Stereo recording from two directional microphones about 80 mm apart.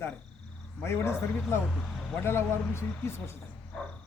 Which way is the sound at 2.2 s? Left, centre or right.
Left.